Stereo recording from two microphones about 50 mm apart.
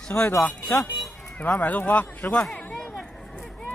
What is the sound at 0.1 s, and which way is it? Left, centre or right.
Speech, left.